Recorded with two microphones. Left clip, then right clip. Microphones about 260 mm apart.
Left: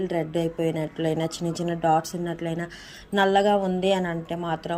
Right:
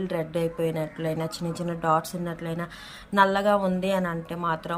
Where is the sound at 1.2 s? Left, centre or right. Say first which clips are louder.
Left 3 dB; centre.